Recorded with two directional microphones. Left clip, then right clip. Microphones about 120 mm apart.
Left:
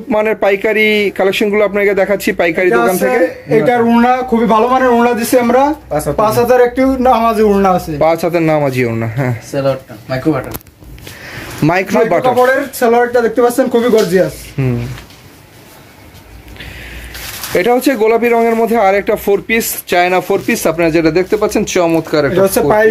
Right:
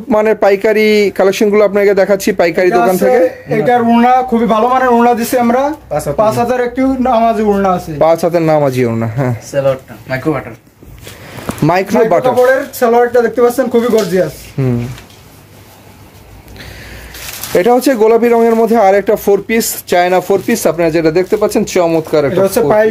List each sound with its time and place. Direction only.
0.1 s speech: 40° right (ahead or behind)
3.4 s speech: 15° left (ahead or behind); by 7.8 s 35° left (ahead or behind)
8.0 s speech: 40° right (ahead or behind)
9.7 s speech: 20° right (ahead or behind)
11.6 s speech: 35° right (ahead or behind)
12.4 s speech: 10° left (ahead or behind)
14.6 s speech: 35° right (ahead or behind)
17.5 s speech: 40° right (ahead or behind); by 22.4 s 15° right (ahead or behind)
22.4 s speech: 5° right (ahead or behind)